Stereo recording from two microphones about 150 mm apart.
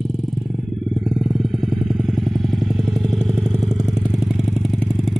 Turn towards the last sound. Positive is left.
turn(degrees=5)  # may be behind; listen again after turning